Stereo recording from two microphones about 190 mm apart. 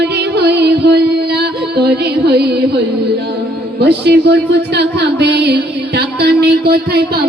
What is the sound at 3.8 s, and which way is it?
Speech, 60° right (ahead or behind).